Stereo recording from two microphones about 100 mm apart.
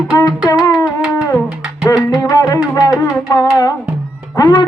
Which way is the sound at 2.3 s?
35° left (ahead or behind).